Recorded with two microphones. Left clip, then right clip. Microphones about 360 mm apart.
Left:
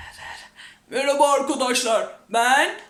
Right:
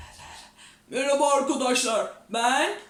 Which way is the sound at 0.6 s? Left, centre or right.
Centre.